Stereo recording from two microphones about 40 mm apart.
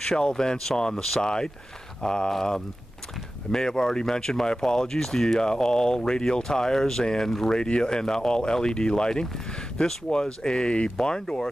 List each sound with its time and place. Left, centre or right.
0.0 s speech: centre
7.5 s speech: left